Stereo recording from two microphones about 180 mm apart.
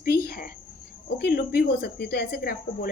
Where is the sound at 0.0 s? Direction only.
55° left (ahead or behind).